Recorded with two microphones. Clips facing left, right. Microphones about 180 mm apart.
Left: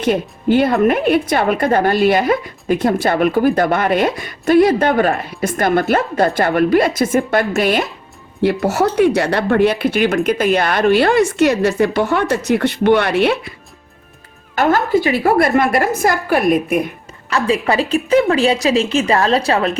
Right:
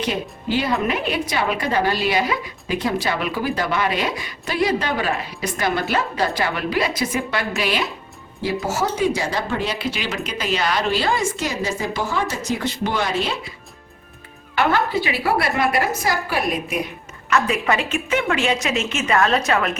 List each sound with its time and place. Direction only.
0.0 s a woman's voice: 55° left (ahead or behind)
8.6 s speech: 65° left (ahead or behind)
14.5 s a woman's voice: 45° left (ahead or behind)
17.2 s a woman's voice: 30° left (ahead or behind)